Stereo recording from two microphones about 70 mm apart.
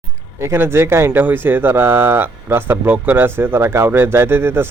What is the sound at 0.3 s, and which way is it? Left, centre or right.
A man's voice, right.